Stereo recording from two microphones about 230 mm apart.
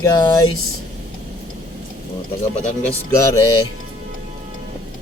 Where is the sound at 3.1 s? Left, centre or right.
Centre.